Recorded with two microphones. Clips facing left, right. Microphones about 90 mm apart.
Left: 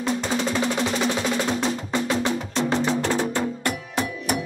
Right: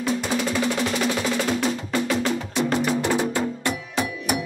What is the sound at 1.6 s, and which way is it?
Music, 20° left (ahead or behind).